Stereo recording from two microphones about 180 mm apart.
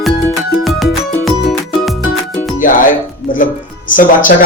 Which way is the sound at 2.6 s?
45° left (ahead or behind).